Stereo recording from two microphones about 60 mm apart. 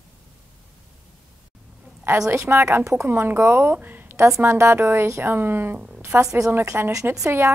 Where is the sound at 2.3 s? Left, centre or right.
Right.